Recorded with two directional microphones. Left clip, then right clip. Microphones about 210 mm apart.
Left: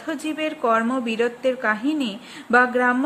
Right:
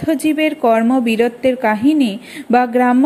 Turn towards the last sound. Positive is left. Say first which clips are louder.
# right 4 dB
turn(degrees=-15)  # may be behind; listen again after turning